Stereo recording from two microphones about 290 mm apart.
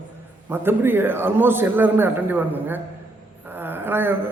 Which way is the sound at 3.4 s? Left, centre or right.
Centre.